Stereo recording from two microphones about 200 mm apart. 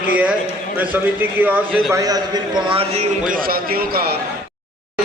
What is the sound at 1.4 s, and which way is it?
Speech, 5° right (ahead or behind).